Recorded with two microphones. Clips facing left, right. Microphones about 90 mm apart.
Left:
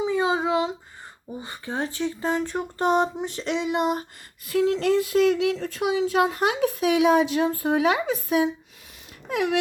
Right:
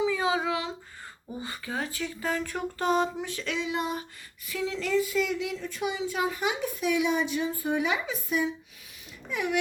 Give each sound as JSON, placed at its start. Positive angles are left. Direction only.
{"t": 0.0, "sound": "a sound", "side_deg": 30}
{"t": 1.4, "sound": "speech", "side_deg": 25}
{"t": 3.6, "sound": "a sound", "side_deg": 60}
{"t": 4.4, "sound": "speech", "side_deg": 55}
{"t": 5.6, "sound": "a woman's voice", "side_deg": 75}
{"t": 9.3, "sound": "a woman's voice", "side_deg": 85}